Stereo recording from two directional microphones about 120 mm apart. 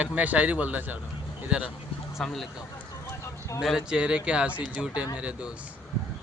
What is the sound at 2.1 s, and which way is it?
Speech, centre (ahead or behind).